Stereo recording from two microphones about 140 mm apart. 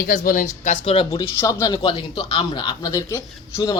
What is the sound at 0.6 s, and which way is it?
Speech, 50° left (ahead or behind).